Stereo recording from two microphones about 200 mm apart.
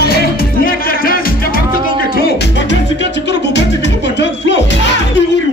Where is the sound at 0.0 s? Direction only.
50° left (ahead or behind).